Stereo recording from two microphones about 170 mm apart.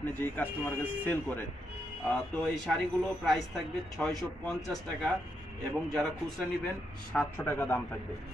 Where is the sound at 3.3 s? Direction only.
Centre (ahead or behind).